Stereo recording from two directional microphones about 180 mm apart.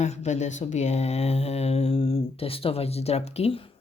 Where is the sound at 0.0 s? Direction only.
40° left (ahead or behind).